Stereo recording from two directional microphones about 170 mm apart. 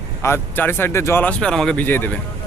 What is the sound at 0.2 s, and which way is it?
Speech, 15° left (ahead or behind).